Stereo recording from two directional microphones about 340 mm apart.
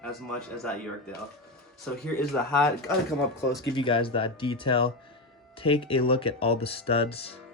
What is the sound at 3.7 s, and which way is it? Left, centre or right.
Speech, centre.